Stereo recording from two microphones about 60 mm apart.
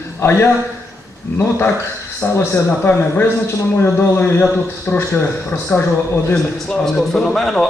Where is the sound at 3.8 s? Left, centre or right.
Left.